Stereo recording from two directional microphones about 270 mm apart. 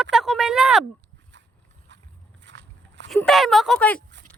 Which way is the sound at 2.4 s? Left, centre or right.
Right.